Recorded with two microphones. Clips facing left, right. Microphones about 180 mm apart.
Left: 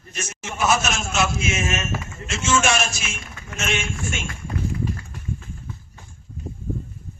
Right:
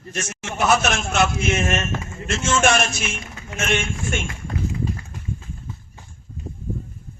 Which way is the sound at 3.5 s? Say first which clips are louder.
Right 3 dB; 55° right (ahead or behind).